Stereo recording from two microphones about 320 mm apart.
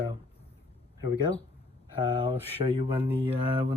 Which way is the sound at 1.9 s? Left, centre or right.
Centre.